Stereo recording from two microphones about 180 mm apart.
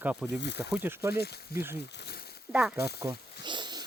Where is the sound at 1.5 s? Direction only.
15° right (ahead or behind).